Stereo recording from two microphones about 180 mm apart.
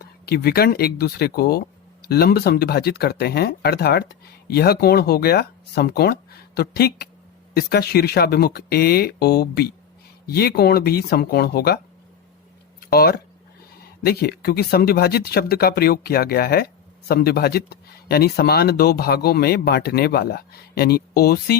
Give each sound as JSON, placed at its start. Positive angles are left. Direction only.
{"t": 0.0, "sound": "speech", "side_deg": 60}
{"t": 12.9, "sound": "speech", "side_deg": 60}